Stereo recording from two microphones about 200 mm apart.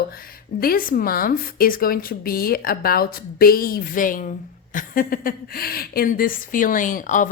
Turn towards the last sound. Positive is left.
turn(degrees=40)  # may be behind; listen again after turning